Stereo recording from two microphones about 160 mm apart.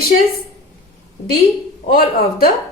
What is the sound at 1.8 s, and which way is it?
Speech, 65° left (ahead or behind).